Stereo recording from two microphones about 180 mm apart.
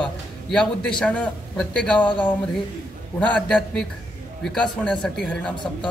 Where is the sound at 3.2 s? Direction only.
5° left (ahead or behind).